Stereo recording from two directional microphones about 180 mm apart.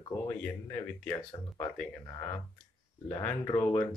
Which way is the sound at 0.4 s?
10° left (ahead or behind).